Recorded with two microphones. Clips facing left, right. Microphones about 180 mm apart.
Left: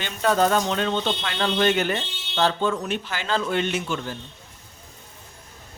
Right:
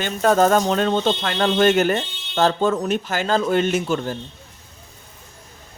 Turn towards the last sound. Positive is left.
turn(degrees=-40)  # may be behind; listen again after turning